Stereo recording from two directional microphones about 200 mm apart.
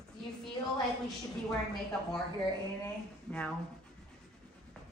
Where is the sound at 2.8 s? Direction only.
5° left (ahead or behind).